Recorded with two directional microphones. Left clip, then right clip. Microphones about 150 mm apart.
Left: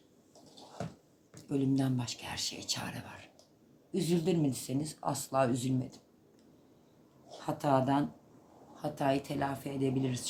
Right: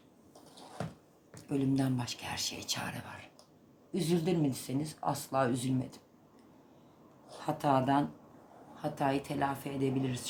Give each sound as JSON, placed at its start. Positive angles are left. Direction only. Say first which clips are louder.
{"t": 1.5, "sound": "speech", "louder": "even", "side_deg": 0}
{"t": 7.3, "sound": "a woman's voice", "louder": "even", "side_deg": 0}